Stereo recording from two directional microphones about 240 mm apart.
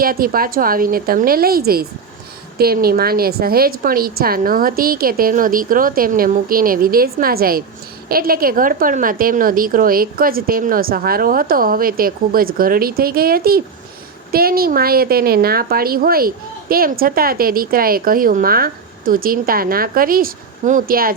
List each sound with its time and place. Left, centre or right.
0.0 s a woman's voice: right